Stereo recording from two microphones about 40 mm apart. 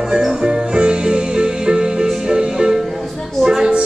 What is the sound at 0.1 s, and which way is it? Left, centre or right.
Music, centre.